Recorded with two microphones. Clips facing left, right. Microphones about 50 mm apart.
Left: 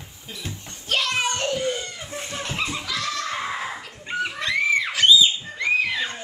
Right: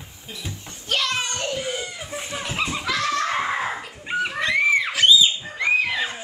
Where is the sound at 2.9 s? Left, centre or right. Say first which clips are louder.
Right 6 dB; right.